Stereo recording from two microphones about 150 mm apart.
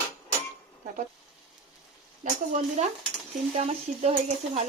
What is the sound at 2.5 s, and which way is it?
A woman's voice, 50° right (ahead or behind).